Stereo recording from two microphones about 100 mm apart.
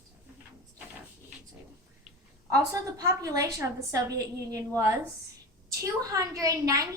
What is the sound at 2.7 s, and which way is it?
A child's voice, 35° right (ahead or behind).